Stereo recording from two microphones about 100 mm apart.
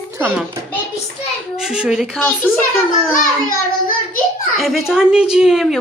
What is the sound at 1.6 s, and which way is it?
Speech, 5° right (ahead or behind).